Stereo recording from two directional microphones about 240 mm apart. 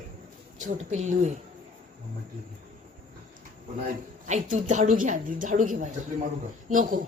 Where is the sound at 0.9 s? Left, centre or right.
Right.